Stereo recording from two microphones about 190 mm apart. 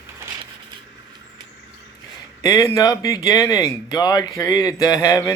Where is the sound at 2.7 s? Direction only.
20° left (ahead or behind).